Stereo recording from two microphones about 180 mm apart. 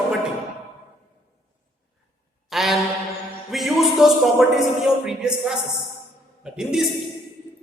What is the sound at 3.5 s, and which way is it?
Music, centre (ahead or behind).